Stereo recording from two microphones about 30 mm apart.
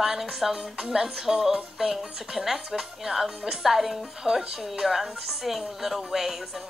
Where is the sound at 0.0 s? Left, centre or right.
Centre.